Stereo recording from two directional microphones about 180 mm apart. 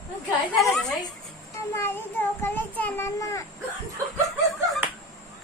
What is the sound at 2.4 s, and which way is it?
A child's voice, 10° left (ahead or behind).